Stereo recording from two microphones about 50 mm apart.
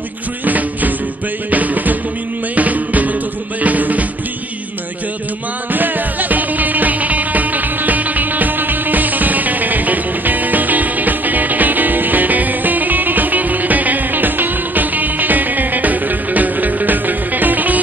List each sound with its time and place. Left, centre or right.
0.5 s music: right
5.7 s music: right